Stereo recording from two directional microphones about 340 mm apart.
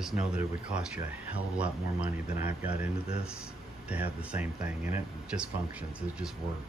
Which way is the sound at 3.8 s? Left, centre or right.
Centre.